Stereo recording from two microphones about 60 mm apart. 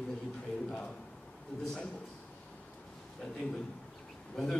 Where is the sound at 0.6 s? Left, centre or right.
Centre.